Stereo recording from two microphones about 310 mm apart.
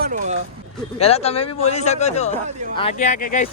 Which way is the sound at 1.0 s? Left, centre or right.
Centre.